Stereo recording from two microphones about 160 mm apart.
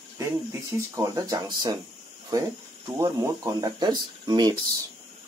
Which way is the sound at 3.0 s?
20° right (ahead or behind).